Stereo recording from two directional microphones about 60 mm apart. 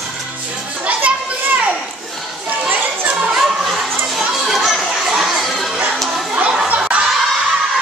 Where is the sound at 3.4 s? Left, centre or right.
Centre.